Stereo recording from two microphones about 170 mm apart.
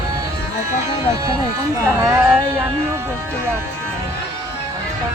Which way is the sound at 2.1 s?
10° right (ahead or behind).